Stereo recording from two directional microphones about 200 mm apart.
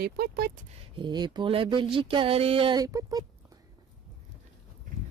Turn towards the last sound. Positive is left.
turn(degrees=-20)  # may be behind; listen again after turning